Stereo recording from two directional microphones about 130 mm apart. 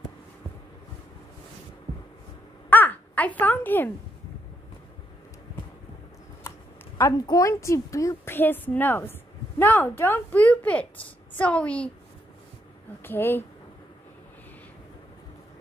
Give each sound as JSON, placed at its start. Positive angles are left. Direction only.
{"t": 2.7, "sound": "a sound", "side_deg": 15}
{"t": 7.0, "sound": "a woman's voice", "side_deg": 25}
{"t": 13.0, "sound": "a woman's voice", "side_deg": 15}